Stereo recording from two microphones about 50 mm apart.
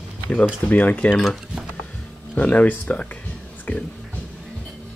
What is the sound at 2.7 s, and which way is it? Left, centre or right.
Cutlery, left.